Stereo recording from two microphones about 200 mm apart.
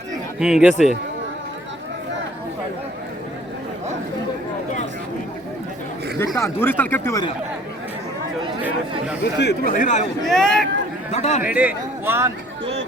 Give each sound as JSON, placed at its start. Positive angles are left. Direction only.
{"t": 0.3, "sound": "speech", "side_deg": -5}
{"t": 6.1, "sound": "speech", "side_deg": 15}
{"t": 9.4, "sound": "speech", "side_deg": 55}
{"t": 9.7, "sound": "speech", "side_deg": 40}
{"t": 10.2, "sound": "speech", "side_deg": 0}
{"t": 11.1, "sound": "speech", "side_deg": 35}
{"t": 11.4, "sound": "speech", "side_deg": -10}